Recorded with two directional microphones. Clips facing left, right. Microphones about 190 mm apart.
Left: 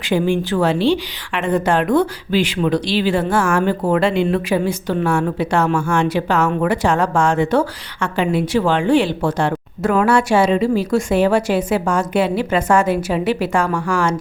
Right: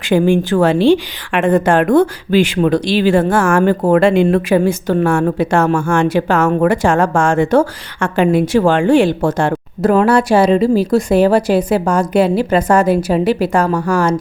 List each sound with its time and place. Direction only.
0.0 s speech: 50° right (ahead or behind)